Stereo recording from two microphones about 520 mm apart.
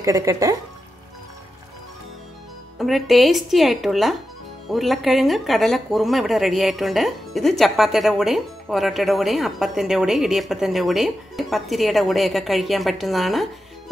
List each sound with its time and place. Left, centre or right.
0.0 s speech: centre
2.8 s speech: centre